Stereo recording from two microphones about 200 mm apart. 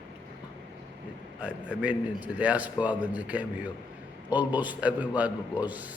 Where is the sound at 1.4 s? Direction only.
5° right (ahead or behind).